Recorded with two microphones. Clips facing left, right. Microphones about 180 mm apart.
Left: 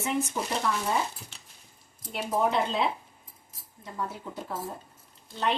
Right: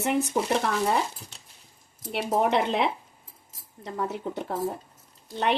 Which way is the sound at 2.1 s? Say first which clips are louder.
Right 3 dB; 70° right (ahead or behind).